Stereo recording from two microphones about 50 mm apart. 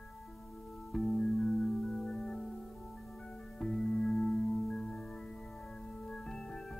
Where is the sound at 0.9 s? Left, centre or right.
Centre.